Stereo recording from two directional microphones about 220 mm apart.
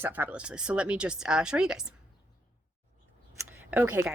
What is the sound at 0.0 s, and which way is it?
Speech, 10° right (ahead or behind).